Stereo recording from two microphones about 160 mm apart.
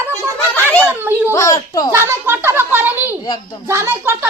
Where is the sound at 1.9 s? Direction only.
15° right (ahead or behind).